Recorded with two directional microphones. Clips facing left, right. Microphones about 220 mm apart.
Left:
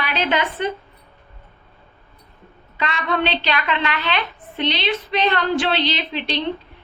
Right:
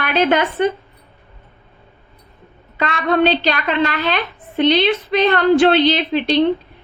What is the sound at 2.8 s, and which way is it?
A woman's voice, 50° right (ahead or behind).